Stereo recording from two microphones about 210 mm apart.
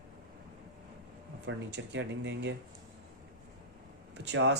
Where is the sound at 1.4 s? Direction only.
60° right (ahead or behind).